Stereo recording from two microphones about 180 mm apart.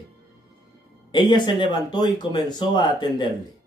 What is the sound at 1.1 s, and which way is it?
Speech, 25° left (ahead or behind).